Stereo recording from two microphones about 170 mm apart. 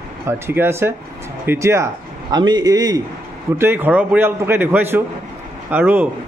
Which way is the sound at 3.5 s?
10° right (ahead or behind).